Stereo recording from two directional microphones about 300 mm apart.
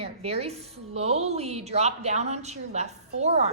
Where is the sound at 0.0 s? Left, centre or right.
Centre.